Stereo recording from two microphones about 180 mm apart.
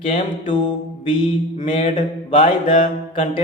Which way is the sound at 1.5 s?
35° left (ahead or behind).